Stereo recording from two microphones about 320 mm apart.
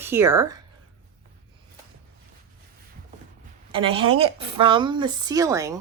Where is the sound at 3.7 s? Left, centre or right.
Centre.